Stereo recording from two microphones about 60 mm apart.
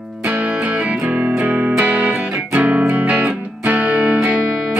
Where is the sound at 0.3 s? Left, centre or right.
Right.